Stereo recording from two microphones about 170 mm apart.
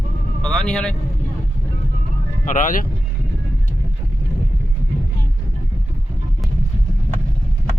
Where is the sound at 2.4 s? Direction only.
50° left (ahead or behind).